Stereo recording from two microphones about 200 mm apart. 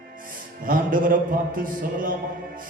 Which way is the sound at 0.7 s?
45° right (ahead or behind).